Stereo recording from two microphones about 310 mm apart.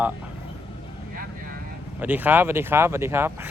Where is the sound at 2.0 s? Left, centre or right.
Centre.